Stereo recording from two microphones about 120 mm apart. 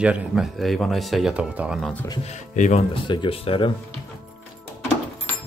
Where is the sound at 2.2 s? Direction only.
85° left.